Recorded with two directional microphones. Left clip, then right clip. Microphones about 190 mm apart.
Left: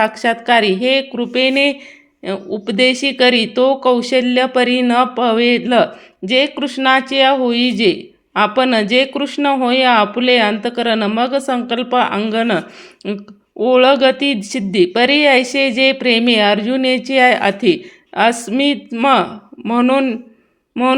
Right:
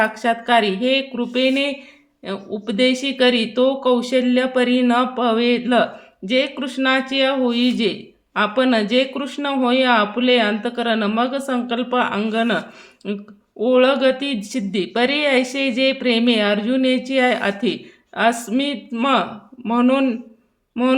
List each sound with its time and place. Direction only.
0.0 s speech: 20° left (ahead or behind)